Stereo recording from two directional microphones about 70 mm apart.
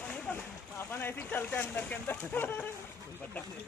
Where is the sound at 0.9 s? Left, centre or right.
Left.